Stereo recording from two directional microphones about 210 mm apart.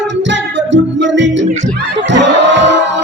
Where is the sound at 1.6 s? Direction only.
60° right (ahead or behind).